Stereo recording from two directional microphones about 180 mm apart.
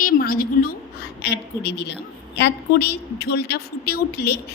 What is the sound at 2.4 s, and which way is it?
A woman's voice, 65° left (ahead or behind).